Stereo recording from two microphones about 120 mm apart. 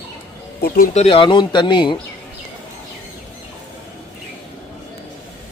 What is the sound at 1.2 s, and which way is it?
Speech, 40° left (ahead or behind).